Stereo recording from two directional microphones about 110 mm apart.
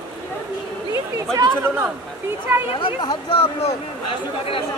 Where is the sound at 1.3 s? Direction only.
25° right (ahead or behind).